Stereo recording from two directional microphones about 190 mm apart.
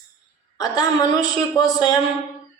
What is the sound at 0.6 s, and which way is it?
A woman's voice, 20° left (ahead or behind).